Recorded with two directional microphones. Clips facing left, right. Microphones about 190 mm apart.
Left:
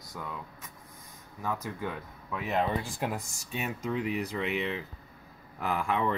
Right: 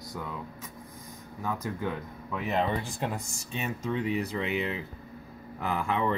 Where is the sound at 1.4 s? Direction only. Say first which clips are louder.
Right 2 dB; centre (ahead or behind).